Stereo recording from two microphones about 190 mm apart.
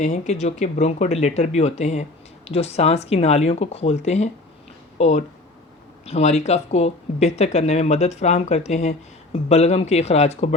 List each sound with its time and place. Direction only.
0.0 s speech: 40° left (ahead or behind)